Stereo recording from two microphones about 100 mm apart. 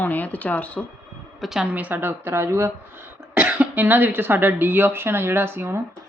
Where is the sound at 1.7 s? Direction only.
15° right (ahead or behind).